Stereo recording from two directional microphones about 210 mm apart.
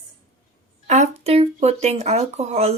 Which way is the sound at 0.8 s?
35° right (ahead or behind).